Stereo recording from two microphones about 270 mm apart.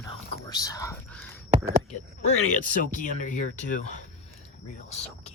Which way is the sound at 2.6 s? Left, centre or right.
Left.